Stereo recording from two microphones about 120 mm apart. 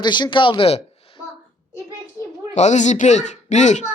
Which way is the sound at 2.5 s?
75° left (ahead or behind).